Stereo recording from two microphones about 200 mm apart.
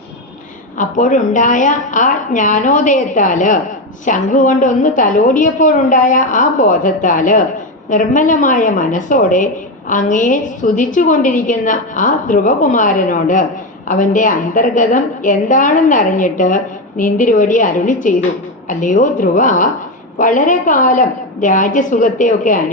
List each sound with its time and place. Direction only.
0.8 s a woman's voice: 40° left (ahead or behind)